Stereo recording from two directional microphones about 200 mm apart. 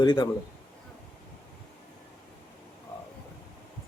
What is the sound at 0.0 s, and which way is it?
Speech, 25° left (ahead or behind).